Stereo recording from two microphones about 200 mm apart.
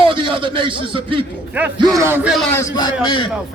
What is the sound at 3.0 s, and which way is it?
Speech, 25° left (ahead or behind).